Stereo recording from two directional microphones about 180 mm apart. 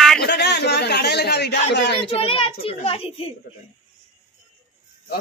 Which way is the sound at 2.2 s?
30° left (ahead or behind).